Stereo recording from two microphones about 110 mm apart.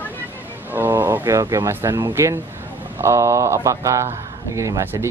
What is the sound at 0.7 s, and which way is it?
Speech, 20° right (ahead or behind).